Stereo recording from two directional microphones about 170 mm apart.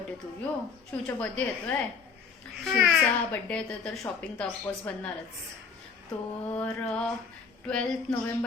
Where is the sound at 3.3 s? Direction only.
5° left (ahead or behind).